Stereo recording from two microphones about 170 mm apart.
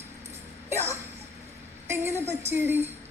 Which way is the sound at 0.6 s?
15° right (ahead or behind).